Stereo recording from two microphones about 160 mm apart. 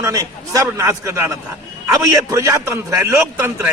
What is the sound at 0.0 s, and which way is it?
A man's voice, 20° right (ahead or behind).